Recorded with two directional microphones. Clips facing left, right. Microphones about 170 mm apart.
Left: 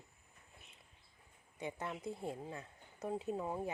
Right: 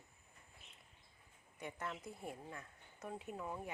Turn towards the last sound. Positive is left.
turn(degrees=30)  # may be behind; listen again after turning